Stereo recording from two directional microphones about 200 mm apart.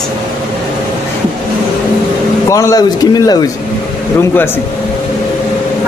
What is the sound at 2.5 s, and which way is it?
Speech, 15° left (ahead or behind).